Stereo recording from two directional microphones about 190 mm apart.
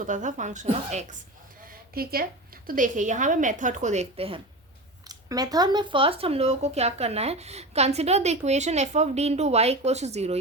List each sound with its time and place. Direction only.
0.0 s speech: 40° right (ahead or behind)
1.6 s a sound: 50° right (ahead or behind)
2.6 s speech: 45° right (ahead or behind)
5.0 s speech: 20° right (ahead or behind); by 10.3 s 35° right (ahead or behind)